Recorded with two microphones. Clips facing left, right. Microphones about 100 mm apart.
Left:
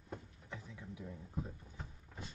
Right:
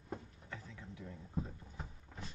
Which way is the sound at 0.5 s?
15° left (ahead or behind).